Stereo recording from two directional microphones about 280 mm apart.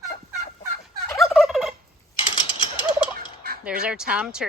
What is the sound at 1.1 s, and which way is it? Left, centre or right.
Fowl, centre.